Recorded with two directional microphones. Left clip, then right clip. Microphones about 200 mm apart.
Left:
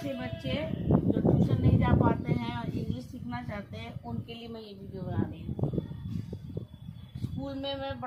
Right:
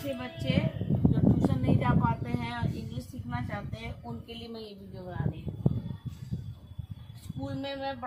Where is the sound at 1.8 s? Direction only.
15° left (ahead or behind).